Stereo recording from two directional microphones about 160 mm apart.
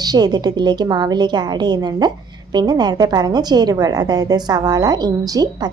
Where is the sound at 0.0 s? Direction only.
25° right (ahead or behind).